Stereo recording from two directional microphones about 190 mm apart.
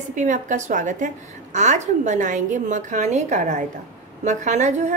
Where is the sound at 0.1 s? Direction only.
40° right (ahead or behind).